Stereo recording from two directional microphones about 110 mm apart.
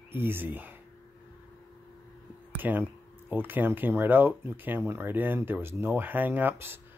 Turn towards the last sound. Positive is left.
turn(degrees=-20)  # may be behind; listen again after turning